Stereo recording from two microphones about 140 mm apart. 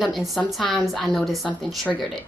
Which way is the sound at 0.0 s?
Centre (ahead or behind).